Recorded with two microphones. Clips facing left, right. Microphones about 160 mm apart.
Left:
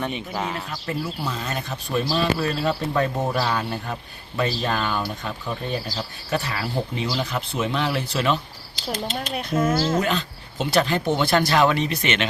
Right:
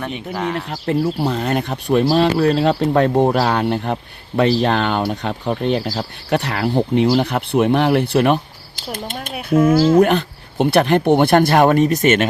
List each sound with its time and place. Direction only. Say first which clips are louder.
0.0 s speech: right 4 dB; centre (ahead or behind)
0.9 s speech: right 11 dB; 60° right (ahead or behind)
5.9 s speech: right 6 dB; 60° right (ahead or behind)
9.3 s speech: right 9 dB; 10° right (ahead or behind)
10.0 s speech: right 10 dB; 60° right (ahead or behind)